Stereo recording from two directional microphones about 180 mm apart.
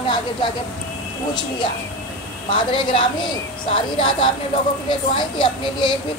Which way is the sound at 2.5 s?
30° left (ahead or behind).